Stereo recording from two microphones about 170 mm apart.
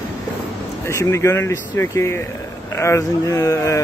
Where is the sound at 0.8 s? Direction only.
15° left (ahead or behind).